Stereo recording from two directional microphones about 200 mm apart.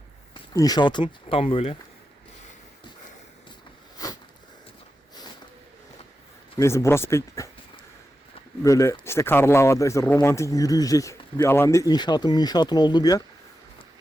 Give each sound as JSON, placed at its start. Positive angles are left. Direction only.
{"t": 0.3, "sound": "speech", "side_deg": 20}
{"t": 3.9, "sound": "a sound", "side_deg": 20}
{"t": 6.6, "sound": "speech", "side_deg": 15}
{"t": 8.6, "sound": "speech", "side_deg": 15}